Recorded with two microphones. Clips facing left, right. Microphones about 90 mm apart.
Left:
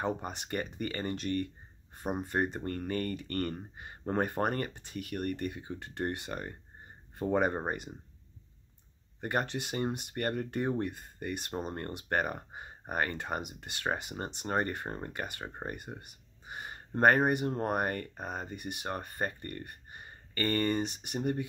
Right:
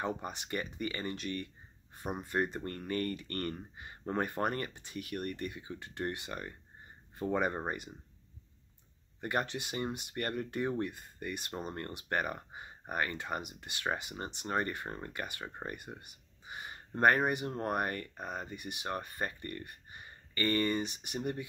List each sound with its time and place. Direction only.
0.0 s speech: 35° left (ahead or behind)
2.0 s speech: 30° left (ahead or behind)
9.2 s speech: 35° left (ahead or behind)
11.6 s speech: 20° left (ahead or behind); by 15.0 s 40° left (ahead or behind)
15.0 s speech: 25° left (ahead or behind)
16.4 s a sound: 35° left (ahead or behind)
17.3 s speech: 35° left (ahead or behind)
18.5 s speech: 45° left (ahead or behind)